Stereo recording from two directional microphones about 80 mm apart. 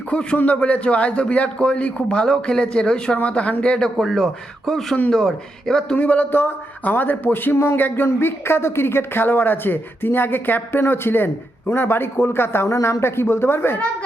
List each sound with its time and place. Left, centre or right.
0.1 s a man's voice: centre
6.0 s a man's voice: left